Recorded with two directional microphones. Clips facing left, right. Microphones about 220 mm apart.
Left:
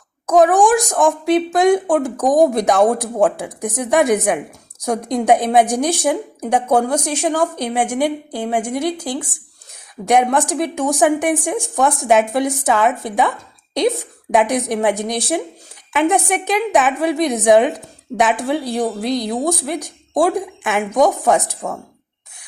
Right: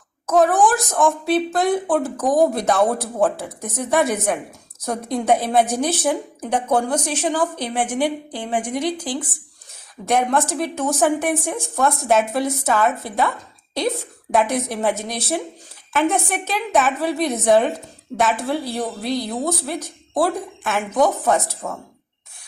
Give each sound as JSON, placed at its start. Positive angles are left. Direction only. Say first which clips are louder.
{"t": 0.3, "sound": "a woman's voice", "louder": "left 4 dB", "side_deg": 15}